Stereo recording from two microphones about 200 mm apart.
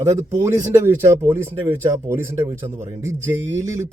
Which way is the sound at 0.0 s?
15° right (ahead or behind).